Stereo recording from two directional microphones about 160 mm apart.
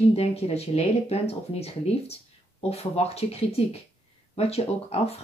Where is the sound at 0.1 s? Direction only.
40° left (ahead or behind).